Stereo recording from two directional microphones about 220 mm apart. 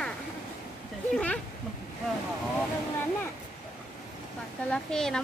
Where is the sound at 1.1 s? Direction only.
5° left (ahead or behind).